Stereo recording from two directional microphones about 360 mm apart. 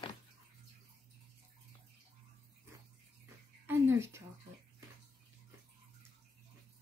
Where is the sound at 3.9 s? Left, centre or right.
Centre.